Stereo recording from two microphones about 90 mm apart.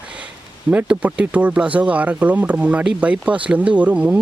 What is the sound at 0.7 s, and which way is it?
Speech, 15° right (ahead or behind).